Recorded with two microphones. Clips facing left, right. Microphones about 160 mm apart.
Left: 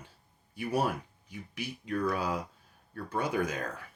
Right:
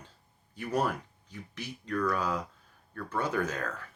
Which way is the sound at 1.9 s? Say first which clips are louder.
Right 1 dB; 30° left (ahead or behind).